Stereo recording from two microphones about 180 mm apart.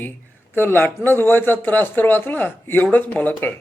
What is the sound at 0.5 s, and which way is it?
A man's voice, 10° left (ahead or behind).